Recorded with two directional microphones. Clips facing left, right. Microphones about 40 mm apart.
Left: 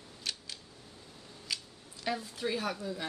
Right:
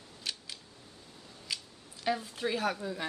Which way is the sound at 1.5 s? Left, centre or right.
Centre.